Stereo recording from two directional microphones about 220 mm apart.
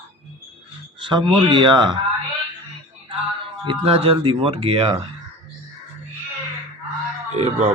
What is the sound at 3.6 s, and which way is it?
Speech, 25° right (ahead or behind).